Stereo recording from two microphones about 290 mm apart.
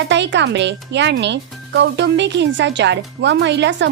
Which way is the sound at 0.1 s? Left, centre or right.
Right.